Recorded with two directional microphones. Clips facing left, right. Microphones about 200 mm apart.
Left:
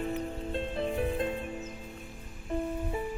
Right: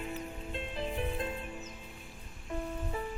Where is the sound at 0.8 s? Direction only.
25° left (ahead or behind).